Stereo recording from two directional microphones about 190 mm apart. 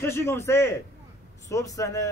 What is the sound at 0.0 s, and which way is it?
A man's voice, 15° left (ahead or behind).